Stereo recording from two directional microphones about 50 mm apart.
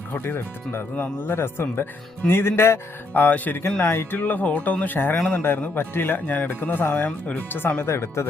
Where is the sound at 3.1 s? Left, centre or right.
Left.